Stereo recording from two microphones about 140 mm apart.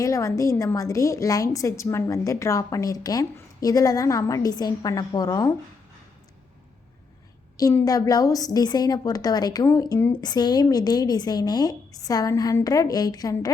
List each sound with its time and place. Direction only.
0.0 s a woman's voice: 25° left (ahead or behind)
7.7 s a woman's voice: 20° left (ahead or behind)